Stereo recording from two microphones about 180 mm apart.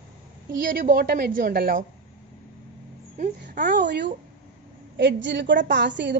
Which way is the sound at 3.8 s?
75° right (ahead or behind).